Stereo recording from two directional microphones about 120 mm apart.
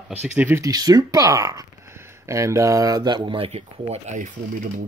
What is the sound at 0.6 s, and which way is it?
Speech, 30° right (ahead or behind).